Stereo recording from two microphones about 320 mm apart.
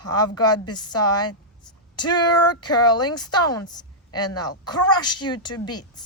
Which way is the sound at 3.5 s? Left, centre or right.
Centre.